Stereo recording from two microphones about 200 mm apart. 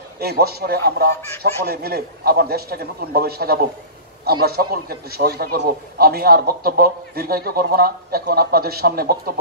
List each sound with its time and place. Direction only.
0.2 s a man's voice: 50° right (ahead or behind)